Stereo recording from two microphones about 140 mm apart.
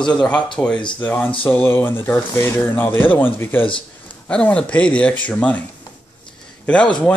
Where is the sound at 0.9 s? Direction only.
15° left (ahead or behind).